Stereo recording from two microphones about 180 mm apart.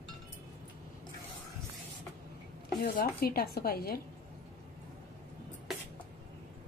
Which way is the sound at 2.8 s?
60° left (ahead or behind).